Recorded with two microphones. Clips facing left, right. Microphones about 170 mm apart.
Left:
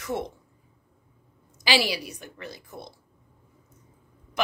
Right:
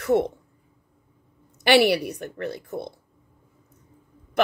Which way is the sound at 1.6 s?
60° right (ahead or behind).